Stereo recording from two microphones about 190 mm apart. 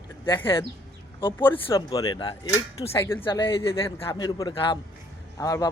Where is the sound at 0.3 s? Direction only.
25° left (ahead or behind).